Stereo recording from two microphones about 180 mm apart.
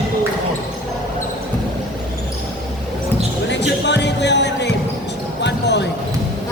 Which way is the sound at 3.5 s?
75° left (ahead or behind).